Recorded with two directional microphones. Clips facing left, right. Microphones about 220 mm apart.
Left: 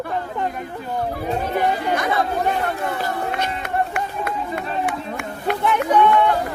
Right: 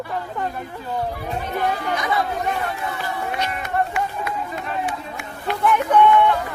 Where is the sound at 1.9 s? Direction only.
55° left (ahead or behind).